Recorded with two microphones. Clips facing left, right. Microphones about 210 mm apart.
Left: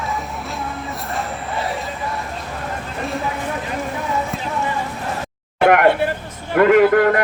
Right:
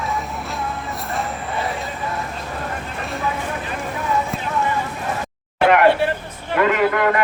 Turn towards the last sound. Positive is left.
turn(degrees=50)  # may be behind; listen again after turning